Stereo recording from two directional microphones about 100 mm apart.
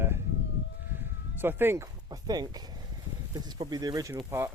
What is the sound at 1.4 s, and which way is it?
Speech, 20° right (ahead or behind).